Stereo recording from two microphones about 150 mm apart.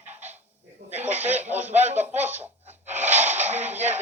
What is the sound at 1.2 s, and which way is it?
Speech, 45° right (ahead or behind).